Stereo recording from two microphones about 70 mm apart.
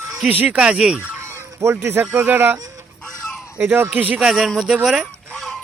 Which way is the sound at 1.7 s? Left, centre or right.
Right.